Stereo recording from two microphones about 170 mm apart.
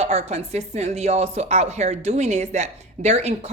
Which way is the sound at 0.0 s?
40° right (ahead or behind).